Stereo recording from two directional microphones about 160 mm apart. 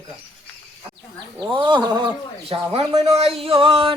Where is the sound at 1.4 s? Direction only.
30° right (ahead or behind).